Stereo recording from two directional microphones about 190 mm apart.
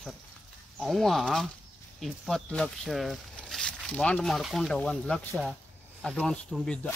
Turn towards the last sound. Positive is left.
turn(degrees=5)  # may be behind; listen again after turning